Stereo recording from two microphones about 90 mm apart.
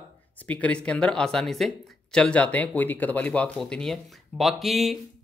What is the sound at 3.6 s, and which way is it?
Speech, 5° left (ahead or behind).